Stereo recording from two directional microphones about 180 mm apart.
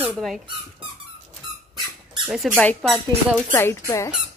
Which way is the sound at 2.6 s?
5° left (ahead or behind).